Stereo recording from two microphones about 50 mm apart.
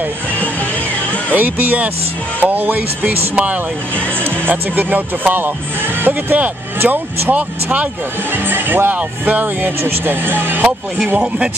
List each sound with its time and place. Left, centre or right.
1.3 s speech: right
4.2 s speech: right
8.3 s speech: right
11.1 s speech: right